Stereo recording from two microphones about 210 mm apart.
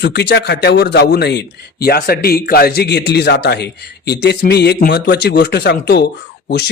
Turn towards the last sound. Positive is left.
turn(degrees=50)  # may be behind; listen again after turning